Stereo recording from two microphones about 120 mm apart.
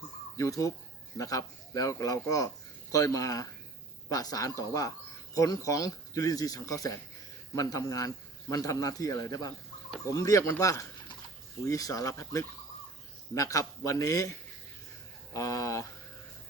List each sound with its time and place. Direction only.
0.3 s a man's voice: 25° left (ahead or behind)